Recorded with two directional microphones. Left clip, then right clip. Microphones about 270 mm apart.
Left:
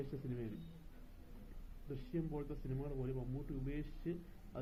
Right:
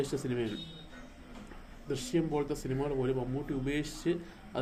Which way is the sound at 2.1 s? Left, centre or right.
Centre.